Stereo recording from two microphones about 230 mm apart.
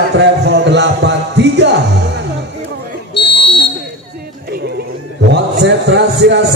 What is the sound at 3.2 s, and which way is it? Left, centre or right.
Buzzer, left.